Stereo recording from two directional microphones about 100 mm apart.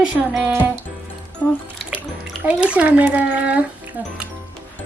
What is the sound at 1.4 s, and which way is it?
Speech, 30° left (ahead or behind).